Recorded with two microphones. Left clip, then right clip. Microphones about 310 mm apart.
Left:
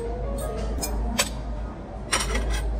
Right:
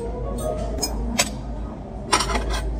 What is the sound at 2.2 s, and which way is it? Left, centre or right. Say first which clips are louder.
Cutlery: right 5 dB; centre.